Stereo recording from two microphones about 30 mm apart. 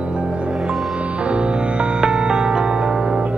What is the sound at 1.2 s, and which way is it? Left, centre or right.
Music, right.